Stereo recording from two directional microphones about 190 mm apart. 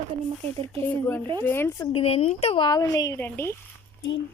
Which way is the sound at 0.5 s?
30° right (ahead or behind).